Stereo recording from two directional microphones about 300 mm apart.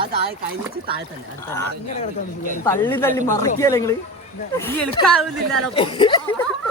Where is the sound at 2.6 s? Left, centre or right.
Centre.